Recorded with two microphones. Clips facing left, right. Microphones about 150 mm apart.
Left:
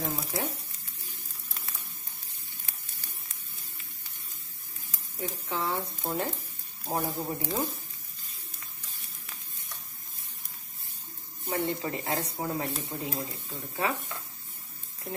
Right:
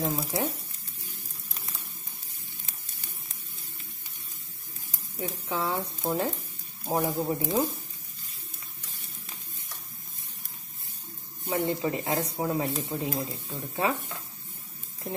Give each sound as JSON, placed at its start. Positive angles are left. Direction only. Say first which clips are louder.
{"t": 0.0, "sound": "speech", "louder": "right 4 dB", "side_deg": -20}
{"t": 5.5, "sound": "speech", "louder": "right 2 dB", "side_deg": -20}
{"t": 6.0, "sound": "a man's voice", "louder": "right 5 dB", "side_deg": 0}
{"t": 11.4, "sound": "speech", "louder": "right 3 dB", "side_deg": -20}